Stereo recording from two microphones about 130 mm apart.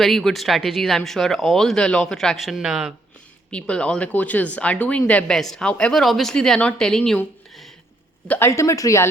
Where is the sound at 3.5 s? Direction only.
10° left (ahead or behind).